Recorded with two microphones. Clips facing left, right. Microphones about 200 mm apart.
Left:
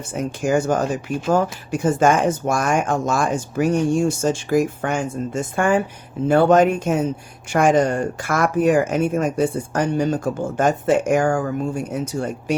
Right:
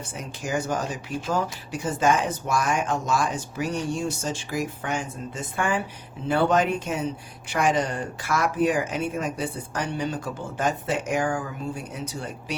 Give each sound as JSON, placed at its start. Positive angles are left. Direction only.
{"t": 0.1, "sound": "speech", "side_deg": 50}